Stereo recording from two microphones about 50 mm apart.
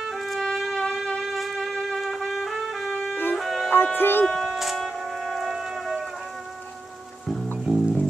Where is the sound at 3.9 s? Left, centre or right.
Left.